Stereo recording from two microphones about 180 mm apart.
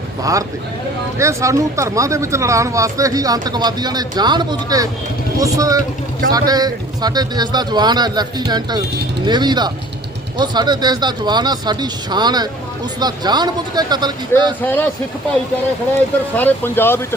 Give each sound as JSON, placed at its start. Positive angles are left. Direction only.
{"t": 0.2, "sound": "speech", "side_deg": -20}
{"t": 14.6, "sound": "speech", "side_deg": 10}
{"t": 16.4, "sound": "speech", "side_deg": 10}